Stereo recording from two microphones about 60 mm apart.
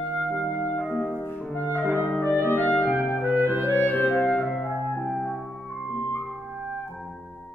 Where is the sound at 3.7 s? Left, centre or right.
Left.